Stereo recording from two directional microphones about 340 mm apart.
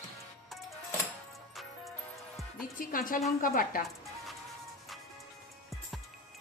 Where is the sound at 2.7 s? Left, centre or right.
Left.